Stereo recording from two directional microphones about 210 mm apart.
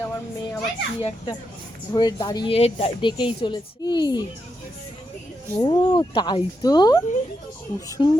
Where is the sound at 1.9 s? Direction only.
20° left (ahead or behind).